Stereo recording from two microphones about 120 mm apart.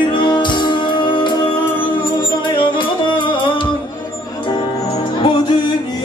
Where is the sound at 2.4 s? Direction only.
40° left (ahead or behind).